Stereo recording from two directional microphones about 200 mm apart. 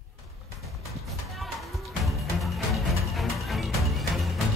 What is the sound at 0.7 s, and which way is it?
Music, centre (ahead or behind).